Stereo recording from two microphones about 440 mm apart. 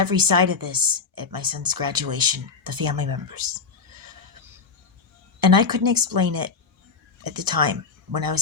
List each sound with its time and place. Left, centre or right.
0.0 s a woman's voice: right
5.4 s a woman's voice: right